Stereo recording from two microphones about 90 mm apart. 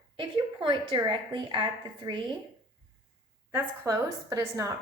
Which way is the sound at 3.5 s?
30° right (ahead or behind).